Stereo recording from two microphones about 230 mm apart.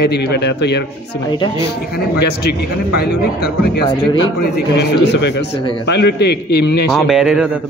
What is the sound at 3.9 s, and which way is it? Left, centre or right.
Speech, left.